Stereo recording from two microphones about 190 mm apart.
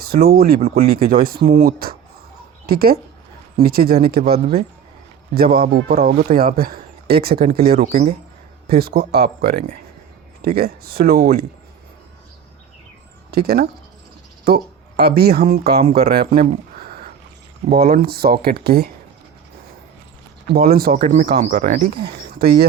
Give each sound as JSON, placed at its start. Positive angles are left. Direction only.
{"t": 0.0, "sound": "speech", "side_deg": -55}
{"t": 6.0, "sound": "speech", "side_deg": -40}
{"t": 13.3, "sound": "speech", "side_deg": -55}
{"t": 16.7, "sound": "a sound", "side_deg": -50}
{"t": 17.7, "sound": "speech", "side_deg": -50}
{"t": 20.7, "sound": "speech", "side_deg": -55}
{"t": 20.9, "sound": "speech", "side_deg": -35}
{"t": 21.5, "sound": "speech", "side_deg": -45}